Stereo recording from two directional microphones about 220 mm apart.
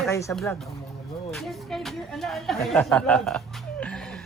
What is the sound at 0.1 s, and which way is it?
Speech, 15° left (ahead or behind).